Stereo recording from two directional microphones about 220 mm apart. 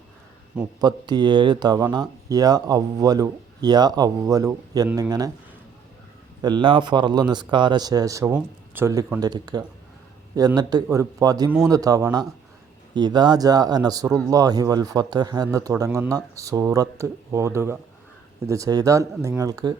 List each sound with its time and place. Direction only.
0.8 s speech: 20° right (ahead or behind)
6.4 s a man's voice: 20° right (ahead or behind)